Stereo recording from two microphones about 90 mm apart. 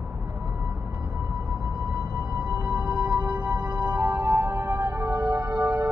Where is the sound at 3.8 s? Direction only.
35° right (ahead or behind).